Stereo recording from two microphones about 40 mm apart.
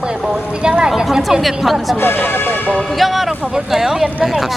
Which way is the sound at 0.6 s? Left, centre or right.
Right.